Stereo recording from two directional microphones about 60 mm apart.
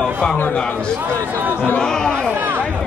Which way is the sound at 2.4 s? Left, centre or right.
Right.